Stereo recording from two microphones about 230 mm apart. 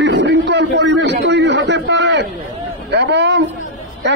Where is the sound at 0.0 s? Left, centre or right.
Right.